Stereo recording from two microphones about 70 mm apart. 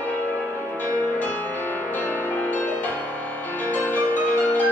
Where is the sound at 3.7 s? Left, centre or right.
Left.